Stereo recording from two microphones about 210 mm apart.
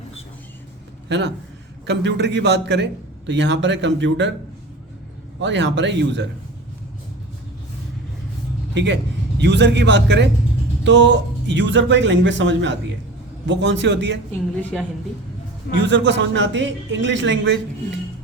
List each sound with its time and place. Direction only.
1.0 s a man's voice: 55° right (ahead or behind)
5.4 s a man's voice: 60° right (ahead or behind)
8.7 s a man's voice: 55° right (ahead or behind)
14.5 s a woman's voice: 5° left (ahead or behind)
15.9 s a man's voice: 60° right (ahead or behind)